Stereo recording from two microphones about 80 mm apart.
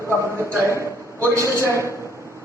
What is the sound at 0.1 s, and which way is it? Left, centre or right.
A man's voice, right.